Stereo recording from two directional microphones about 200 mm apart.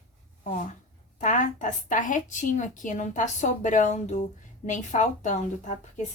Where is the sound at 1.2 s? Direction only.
40° left (ahead or behind).